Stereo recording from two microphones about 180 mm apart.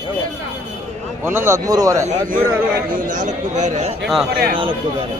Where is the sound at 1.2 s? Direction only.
15° right (ahead or behind).